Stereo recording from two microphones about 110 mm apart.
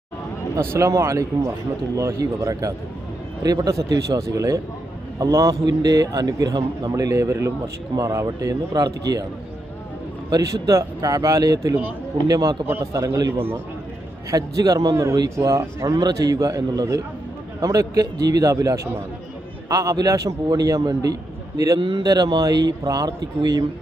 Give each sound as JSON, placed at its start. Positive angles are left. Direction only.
{"t": 0.5, "sound": "a man's voice", "side_deg": -25}
{"t": 10.2, "sound": "a man's voice", "side_deg": -30}
{"t": 21.8, "sound": "speech", "side_deg": -50}
{"t": 22.0, "sound": "a man's voice", "side_deg": -35}